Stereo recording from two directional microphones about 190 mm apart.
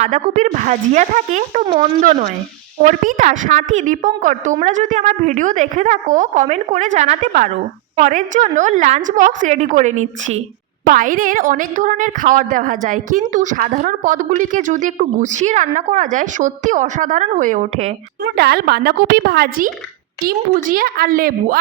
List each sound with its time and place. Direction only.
0.0 s a woman's voice: 40° right (ahead or behind)
18.2 s a woman's voice: 60° right (ahead or behind)